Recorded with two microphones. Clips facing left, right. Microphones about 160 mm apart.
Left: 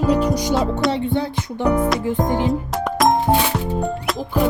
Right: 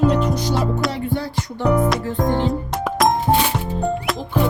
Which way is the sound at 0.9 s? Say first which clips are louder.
Left 3 dB; 20° left (ahead or behind).